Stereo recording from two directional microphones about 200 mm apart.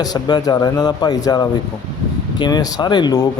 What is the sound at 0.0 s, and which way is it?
Speech, 20° left (ahead or behind).